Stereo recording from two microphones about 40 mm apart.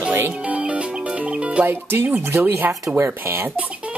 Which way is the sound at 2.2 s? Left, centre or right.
Right.